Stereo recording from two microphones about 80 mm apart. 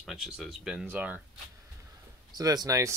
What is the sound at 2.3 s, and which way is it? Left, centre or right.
Speech, right.